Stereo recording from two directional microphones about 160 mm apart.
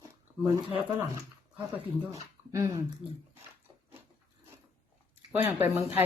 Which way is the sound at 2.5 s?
20° right (ahead or behind).